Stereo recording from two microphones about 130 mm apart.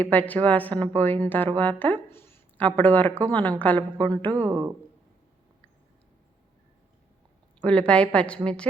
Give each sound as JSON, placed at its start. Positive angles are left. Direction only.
{"t": 0.0, "sound": "a woman's voice", "side_deg": 10}
{"t": 3.8, "sound": "a woman's voice", "side_deg": -40}
{"t": 7.6, "sound": "a woman's voice", "side_deg": 10}